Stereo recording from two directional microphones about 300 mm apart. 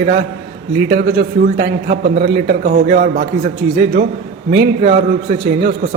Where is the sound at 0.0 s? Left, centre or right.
Right.